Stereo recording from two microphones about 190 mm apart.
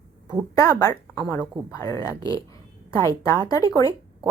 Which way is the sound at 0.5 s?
15° left (ahead or behind).